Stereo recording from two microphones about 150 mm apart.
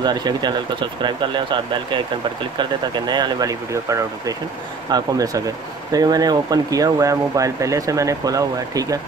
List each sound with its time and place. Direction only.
0.0 s speech: 30° right (ahead or behind)
3.1 s speech: 25° right (ahead or behind)